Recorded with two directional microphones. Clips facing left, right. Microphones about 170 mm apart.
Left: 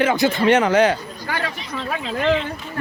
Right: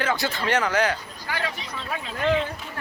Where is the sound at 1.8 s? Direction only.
85° left.